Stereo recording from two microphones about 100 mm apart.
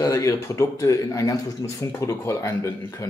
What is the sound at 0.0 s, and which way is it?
Speech, 30° left (ahead or behind).